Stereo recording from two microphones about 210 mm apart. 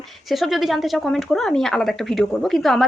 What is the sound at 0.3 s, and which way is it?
Speech, centre (ahead or behind).